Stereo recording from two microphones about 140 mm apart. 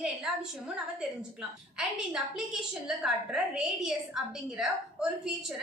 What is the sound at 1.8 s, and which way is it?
A woman's voice, 5° right (ahead or behind).